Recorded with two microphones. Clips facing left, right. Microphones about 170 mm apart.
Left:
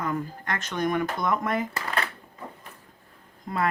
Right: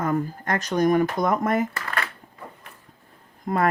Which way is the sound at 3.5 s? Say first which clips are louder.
Right 6 dB; 55° right (ahead or behind).